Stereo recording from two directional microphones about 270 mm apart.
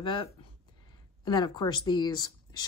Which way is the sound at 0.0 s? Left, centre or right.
Centre.